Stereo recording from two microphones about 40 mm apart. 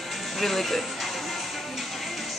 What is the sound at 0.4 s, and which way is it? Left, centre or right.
Speech, centre.